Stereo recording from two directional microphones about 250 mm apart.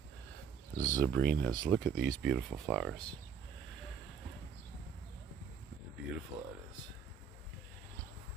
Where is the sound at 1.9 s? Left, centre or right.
Right.